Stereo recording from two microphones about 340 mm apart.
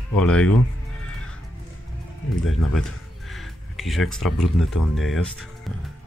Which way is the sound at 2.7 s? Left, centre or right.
Centre.